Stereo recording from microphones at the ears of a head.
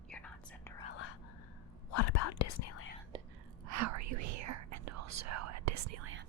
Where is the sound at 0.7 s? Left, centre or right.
Left.